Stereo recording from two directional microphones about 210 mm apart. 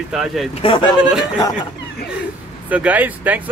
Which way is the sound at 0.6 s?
25° left (ahead or behind).